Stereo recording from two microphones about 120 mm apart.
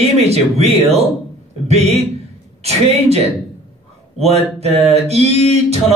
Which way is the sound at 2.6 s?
60° right (ahead or behind).